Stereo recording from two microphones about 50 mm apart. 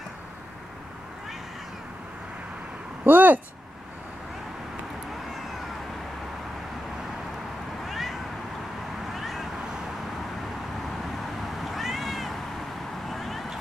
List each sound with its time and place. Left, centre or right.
3.0 s a sound: right
7.8 s cat: centre
9.1 s vehicle: centre
11.6 s cat: centre
13.1 s vehicle: centre